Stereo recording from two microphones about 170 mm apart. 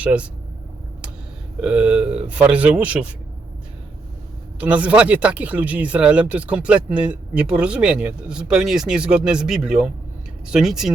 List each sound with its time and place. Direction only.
0.0 s speech: 10° right (ahead or behind)
1.6 s speech: 5° right (ahead or behind)
4.6 s speech: 10° right (ahead or behind)